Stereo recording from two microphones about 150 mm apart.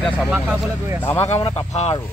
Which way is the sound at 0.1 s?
10° right (ahead or behind).